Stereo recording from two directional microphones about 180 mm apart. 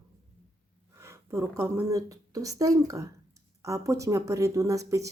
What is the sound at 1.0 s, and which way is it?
A woman's voice, 15° right (ahead or behind).